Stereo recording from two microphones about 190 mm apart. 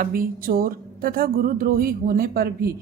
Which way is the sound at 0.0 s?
50° right (ahead or behind).